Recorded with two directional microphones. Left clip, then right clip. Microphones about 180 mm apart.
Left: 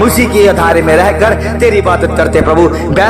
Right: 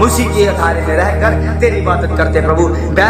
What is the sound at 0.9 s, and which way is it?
Speech, 45° left (ahead or behind).